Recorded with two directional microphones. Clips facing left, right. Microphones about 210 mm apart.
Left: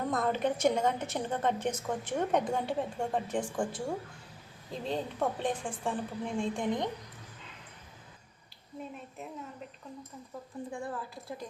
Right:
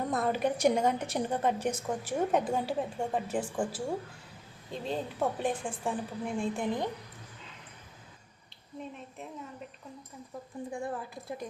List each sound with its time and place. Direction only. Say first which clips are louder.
0.1 s a woman's voice: even; 10° right (ahead or behind)
10.7 s a woman's voice: right 3 dB; 20° right (ahead or behind)